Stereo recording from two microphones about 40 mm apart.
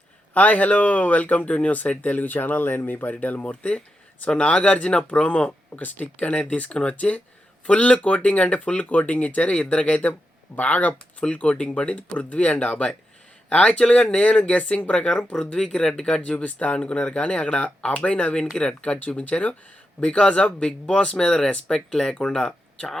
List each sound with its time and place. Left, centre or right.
0.3 s speech: left
3.6 s speech: left
5.8 s speech: left
9.6 s speech: left
16.3 s speech: left
18.9 s speech: left
20.0 s speech: left